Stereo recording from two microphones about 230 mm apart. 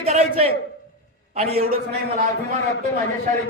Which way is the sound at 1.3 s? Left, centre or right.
Right.